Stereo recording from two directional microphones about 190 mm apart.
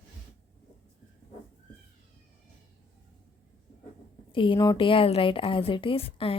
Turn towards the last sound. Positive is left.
turn(degrees=30)  # may be behind; listen again after turning